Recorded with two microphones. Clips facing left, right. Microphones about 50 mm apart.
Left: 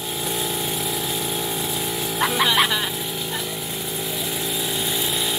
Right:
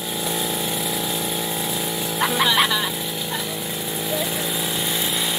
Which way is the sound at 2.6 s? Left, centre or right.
Centre.